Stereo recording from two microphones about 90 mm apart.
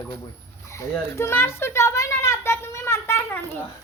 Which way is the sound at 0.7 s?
30° left (ahead or behind).